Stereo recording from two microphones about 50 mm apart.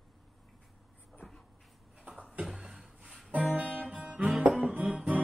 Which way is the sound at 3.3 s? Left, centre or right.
Right.